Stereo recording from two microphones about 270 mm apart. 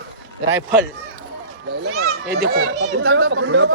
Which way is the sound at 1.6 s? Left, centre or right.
Right.